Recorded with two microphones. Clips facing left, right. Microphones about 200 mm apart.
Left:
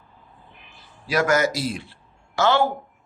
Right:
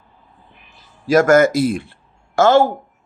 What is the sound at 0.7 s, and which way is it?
A man's voice, 45° right (ahead or behind).